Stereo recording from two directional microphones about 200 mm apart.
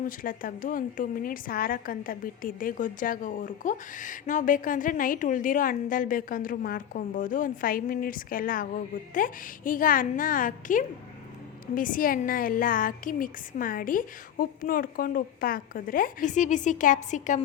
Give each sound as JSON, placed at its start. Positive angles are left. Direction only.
{"t": 0.0, "sound": "a woman's voice", "side_deg": 45}